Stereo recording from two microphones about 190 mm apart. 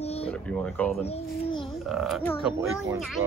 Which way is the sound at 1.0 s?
30° left (ahead or behind).